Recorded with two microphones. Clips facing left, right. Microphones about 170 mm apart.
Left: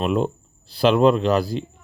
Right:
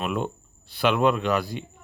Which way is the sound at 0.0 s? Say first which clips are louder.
Left 6 dB; 35° left (ahead or behind).